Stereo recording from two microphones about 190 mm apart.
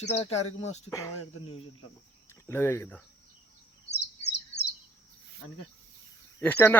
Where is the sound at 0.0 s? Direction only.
30° left (ahead or behind).